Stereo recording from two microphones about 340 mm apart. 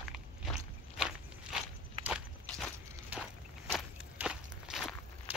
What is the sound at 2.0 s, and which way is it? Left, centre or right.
Walk, centre.